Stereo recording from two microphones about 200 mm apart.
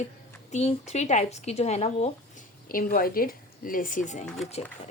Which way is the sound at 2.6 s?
45° left (ahead or behind).